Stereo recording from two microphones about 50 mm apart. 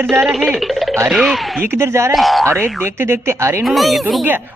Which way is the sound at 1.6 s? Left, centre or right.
Right.